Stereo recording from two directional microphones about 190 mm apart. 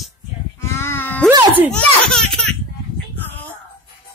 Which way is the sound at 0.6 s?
15° left (ahead or behind).